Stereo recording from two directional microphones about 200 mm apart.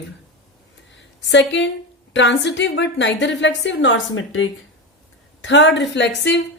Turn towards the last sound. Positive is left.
turn(degrees=60)  # may be behind; listen again after turning